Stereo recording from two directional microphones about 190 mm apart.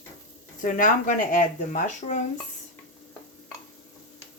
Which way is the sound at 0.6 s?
45° left (ahead or behind).